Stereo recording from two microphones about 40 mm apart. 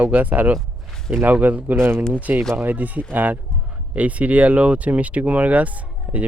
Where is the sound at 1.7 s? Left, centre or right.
Right.